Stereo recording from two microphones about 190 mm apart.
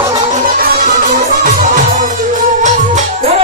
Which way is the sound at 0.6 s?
45° right (ahead or behind).